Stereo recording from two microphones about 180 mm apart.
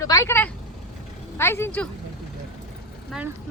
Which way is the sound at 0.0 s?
15° left (ahead or behind).